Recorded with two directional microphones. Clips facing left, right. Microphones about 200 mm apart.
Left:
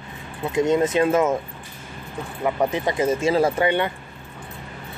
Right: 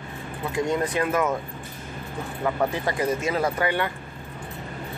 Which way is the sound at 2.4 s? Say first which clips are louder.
Left 3 dB; 20° left (ahead or behind).